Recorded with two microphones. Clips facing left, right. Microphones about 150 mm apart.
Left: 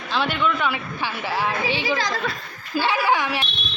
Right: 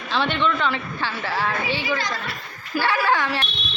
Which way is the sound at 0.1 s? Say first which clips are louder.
Right 1 dB; 5° left (ahead or behind).